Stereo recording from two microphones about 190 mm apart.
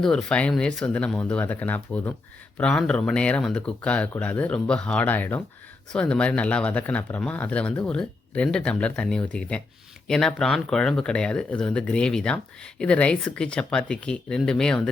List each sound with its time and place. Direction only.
0.0 s speech: 5° left (ahead or behind)